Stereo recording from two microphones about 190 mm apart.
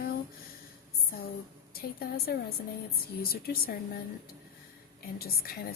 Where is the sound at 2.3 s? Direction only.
55° left (ahead or behind).